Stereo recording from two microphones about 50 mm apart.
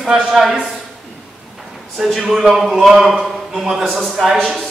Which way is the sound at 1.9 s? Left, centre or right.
Centre.